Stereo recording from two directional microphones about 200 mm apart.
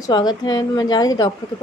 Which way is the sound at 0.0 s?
20° left (ahead or behind).